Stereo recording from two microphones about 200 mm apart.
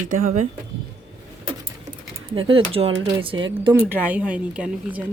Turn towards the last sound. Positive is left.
turn(degrees=-5)  # may be behind; listen again after turning